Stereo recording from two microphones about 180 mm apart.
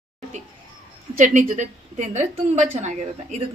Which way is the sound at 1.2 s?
45° right (ahead or behind).